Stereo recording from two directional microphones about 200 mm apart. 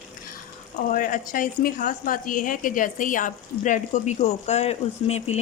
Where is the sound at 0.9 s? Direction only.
40° left (ahead or behind).